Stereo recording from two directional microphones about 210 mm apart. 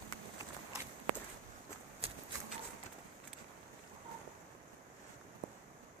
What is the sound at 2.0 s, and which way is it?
Horse, 25° right (ahead or behind).